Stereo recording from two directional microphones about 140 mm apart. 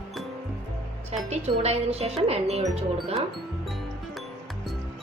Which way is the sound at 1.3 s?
50° right (ahead or behind).